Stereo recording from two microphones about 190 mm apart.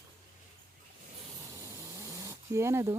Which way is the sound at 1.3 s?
20° right (ahead or behind).